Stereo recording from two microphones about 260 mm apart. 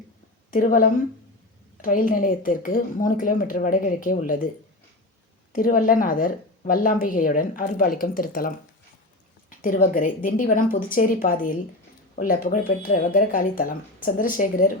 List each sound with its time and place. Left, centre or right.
0.5 s a woman's voice: left
5.5 s a woman's voice: left